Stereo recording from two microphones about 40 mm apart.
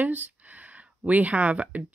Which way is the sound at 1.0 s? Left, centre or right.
Right.